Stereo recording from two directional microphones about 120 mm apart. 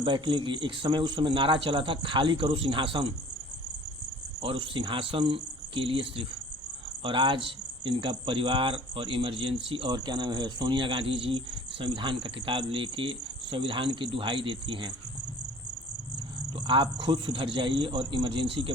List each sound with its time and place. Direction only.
0.0 s speech: 40° right (ahead or behind)
4.4 s speech: 45° right (ahead or behind)
16.6 s a man's voice: 40° right (ahead or behind)